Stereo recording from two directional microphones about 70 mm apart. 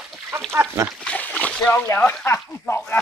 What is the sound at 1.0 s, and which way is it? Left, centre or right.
Splash, left.